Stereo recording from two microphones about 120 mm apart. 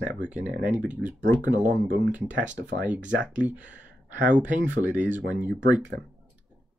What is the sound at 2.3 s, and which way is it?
Speech, 90° right.